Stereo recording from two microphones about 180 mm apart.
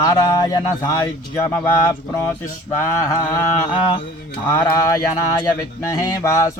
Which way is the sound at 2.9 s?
15° left (ahead or behind).